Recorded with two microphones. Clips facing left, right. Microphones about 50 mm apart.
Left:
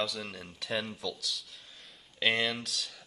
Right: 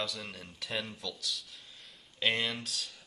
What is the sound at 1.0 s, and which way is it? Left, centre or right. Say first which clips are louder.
Speech: left 2 dB; left.